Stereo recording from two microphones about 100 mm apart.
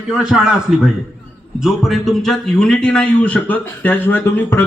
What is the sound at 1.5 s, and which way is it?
A man's voice, centre (ahead or behind).